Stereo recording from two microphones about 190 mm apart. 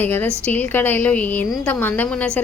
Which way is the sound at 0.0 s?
10° left (ahead or behind).